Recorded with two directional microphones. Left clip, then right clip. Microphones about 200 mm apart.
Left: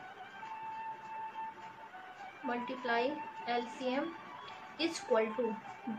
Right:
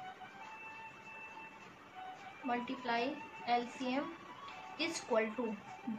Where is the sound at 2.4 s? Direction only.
35° left (ahead or behind).